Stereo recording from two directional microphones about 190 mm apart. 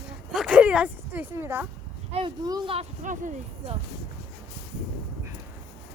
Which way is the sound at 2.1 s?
25° right (ahead or behind).